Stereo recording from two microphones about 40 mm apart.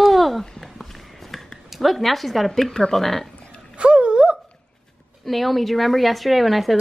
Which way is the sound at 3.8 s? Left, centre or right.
Right.